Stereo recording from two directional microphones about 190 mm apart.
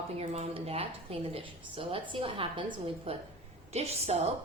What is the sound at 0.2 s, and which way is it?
A woman's voice, 30° right (ahead or behind).